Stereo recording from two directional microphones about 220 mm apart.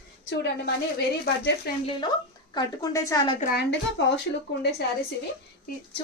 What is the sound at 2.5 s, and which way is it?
Speech, 15° left (ahead or behind).